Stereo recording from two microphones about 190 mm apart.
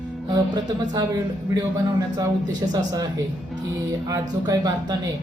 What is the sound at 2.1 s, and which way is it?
Speech, 20° right (ahead or behind).